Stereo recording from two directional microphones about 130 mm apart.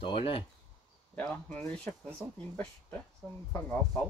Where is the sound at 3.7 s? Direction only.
Centre (ahead or behind).